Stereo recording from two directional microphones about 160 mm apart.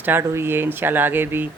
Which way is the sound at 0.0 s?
15° right (ahead or behind).